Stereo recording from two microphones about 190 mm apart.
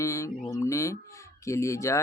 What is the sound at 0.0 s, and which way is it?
Speech, 15° left (ahead or behind).